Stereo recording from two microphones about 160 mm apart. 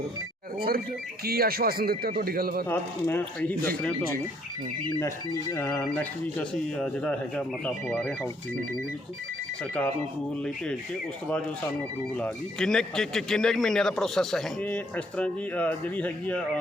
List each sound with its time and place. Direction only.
1.2 s speech: 70° right (ahead or behind)
2.6 s speech: 10° left (ahead or behind)
5.5 s speech: 15° left (ahead or behind)
12.1 s speech: 5° left (ahead or behind)